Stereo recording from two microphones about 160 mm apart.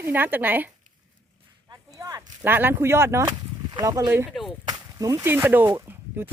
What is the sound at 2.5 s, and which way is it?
Speech, 15° right (ahead or behind).